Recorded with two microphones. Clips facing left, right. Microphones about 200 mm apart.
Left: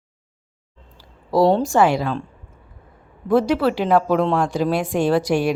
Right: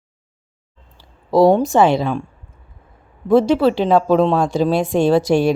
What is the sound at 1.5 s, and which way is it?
Speech, 20° right (ahead or behind).